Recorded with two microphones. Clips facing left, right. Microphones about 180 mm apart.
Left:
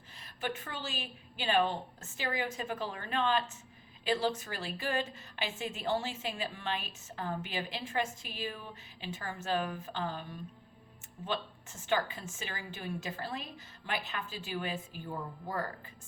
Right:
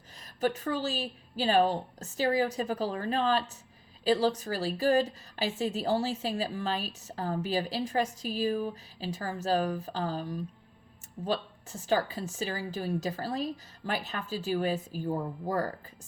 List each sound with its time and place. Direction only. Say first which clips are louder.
0.3 s a woman's voice: right 9 dB; 40° right (ahead or behind)